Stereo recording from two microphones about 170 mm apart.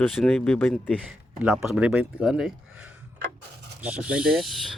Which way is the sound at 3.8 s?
5° right (ahead or behind).